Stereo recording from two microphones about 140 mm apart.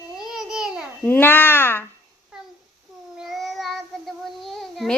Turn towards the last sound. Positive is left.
turn(degrees=0)  # may be behind; listen again after turning